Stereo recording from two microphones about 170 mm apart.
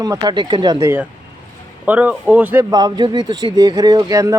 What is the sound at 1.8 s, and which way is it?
Speech, 10° right (ahead or behind).